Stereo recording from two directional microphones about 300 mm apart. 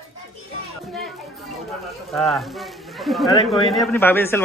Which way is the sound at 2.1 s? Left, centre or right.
Centre.